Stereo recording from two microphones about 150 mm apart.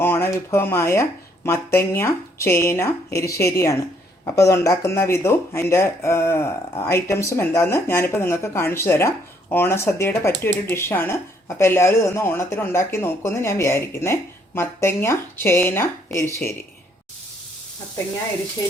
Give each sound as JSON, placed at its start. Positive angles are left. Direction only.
{"t": 0.0, "sound": "speech", "side_deg": 15}